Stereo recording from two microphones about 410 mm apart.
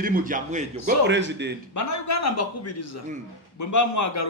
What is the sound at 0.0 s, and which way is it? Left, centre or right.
A man's voice, centre.